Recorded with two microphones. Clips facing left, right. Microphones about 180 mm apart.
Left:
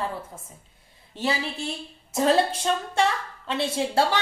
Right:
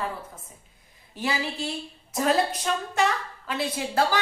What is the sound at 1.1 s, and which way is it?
A woman's voice, 25° left (ahead or behind).